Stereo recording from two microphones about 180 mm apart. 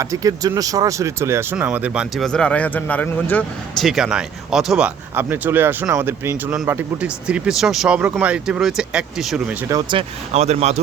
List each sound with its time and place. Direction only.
0.0 s speech: 20° right (ahead or behind); by 3.8 s 10° left (ahead or behind)
3.8 s speech: 5° right (ahead or behind)
9.6 s speech: 20° right (ahead or behind)
10.0 s speech: 35° right (ahead or behind)